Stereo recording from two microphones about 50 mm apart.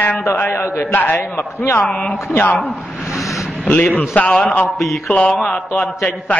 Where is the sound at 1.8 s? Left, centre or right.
Left.